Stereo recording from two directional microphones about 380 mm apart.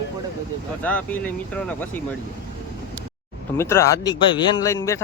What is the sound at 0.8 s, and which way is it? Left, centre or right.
Speech, centre.